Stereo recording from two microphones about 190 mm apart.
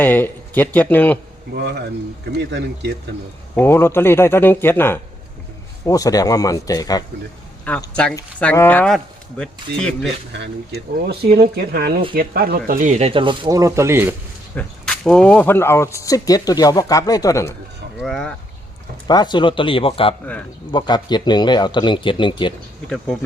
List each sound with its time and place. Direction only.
0.0 s speech: 10° left (ahead or behind)
1.5 s speech: 60° right (ahead or behind)
3.5 s a man's voice: 10° left (ahead or behind)
7.7 s speech: 5° left (ahead or behind)
10.3 s speech: 60° right (ahead or behind); by 14.2 s 10° right (ahead or behind)
14.5 s speech: 5° left (ahead or behind)
18.0 s speech: 5° left (ahead or behind)
19.0 s a man's voice: 20° left (ahead or behind)